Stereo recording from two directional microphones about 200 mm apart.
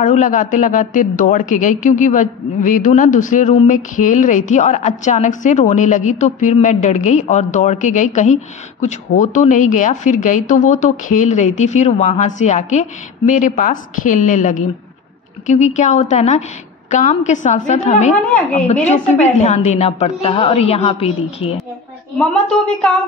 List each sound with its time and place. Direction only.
0.0 s a woman's voice: 40° left (ahead or behind)
22.3 s a woman's voice: 5° left (ahead or behind)